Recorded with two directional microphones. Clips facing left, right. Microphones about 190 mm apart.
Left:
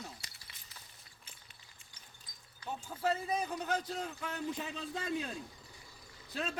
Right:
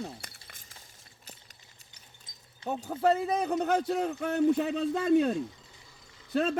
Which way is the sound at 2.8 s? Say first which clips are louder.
Right 8 dB; 60° right (ahead or behind).